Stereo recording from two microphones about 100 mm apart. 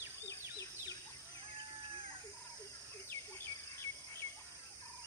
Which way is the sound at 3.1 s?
25° left (ahead or behind).